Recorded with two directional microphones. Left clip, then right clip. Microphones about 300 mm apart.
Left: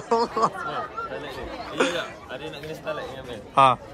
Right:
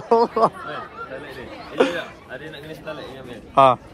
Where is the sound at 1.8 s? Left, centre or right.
Centre.